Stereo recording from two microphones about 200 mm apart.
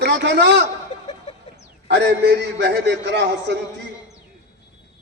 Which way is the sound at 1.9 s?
55° right (ahead or behind).